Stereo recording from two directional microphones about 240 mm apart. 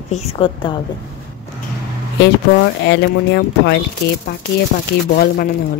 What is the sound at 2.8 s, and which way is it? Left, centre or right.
Speech, left.